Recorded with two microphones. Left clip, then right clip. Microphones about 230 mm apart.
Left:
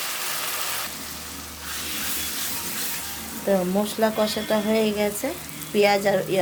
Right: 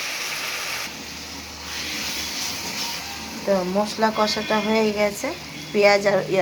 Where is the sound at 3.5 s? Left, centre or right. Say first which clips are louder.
Right 1 dB; left.